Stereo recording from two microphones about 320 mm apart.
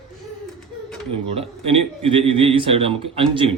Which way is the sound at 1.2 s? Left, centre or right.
Centre.